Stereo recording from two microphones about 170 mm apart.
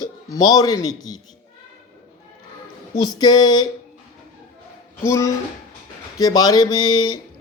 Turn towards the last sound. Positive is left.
turn(degrees=25)  # may be behind; listen again after turning